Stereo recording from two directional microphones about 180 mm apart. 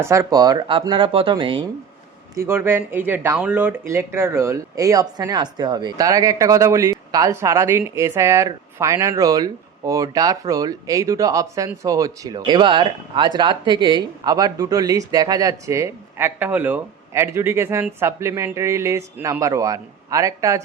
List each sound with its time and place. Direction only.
0.0 s speech: 15° right (ahead or behind)
2.3 s speech: 15° right (ahead or behind)